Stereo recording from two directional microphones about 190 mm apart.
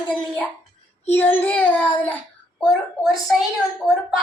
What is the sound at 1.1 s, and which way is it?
Child singing, 10° left (ahead or behind).